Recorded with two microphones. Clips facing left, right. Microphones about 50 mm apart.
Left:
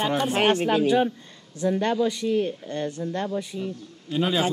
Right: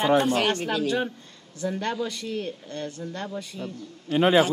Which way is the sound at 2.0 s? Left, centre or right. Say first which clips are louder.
Left 7 dB; centre.